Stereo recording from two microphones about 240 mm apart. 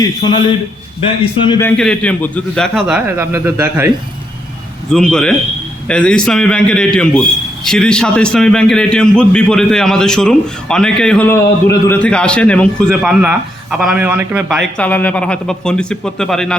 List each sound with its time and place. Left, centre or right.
0.0 s a man's voice: centre
4.9 s a man's voice: centre